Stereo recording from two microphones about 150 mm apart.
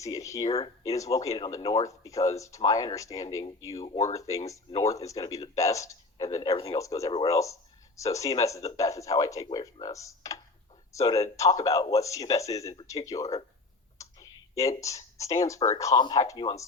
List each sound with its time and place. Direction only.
0.0 s speech: 20° left (ahead or behind)
0.4 s speech: 45° left (ahead or behind)
0.9 s speech: 20° left (ahead or behind)
3.8 s speech: 45° left (ahead or behind)
4.1 s speech: 20° left (ahead or behind)
6.5 s speech: 40° left (ahead or behind)
6.7 s speech: 20° left (ahead or behind)
14.0 s a sound: 20° left (ahead or behind)
15.8 s speech: 25° left (ahead or behind)